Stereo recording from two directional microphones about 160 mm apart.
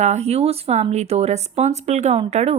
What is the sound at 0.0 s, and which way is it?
Speech, 45° right (ahead or behind).